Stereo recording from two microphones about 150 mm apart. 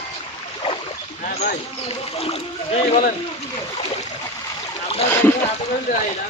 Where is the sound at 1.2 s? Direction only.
55° left (ahead or behind).